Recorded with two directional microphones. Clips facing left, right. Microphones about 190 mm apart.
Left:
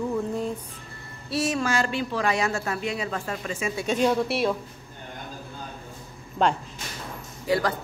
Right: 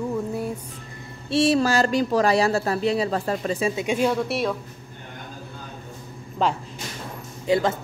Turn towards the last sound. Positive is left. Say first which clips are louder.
# right 3 dB
turn(degrees=-25)  # may be behind; listen again after turning